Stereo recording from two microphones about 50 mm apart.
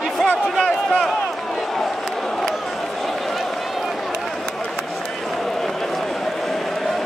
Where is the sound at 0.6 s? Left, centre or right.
Centre.